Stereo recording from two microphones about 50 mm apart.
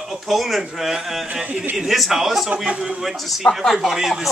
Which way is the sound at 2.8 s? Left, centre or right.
Centre.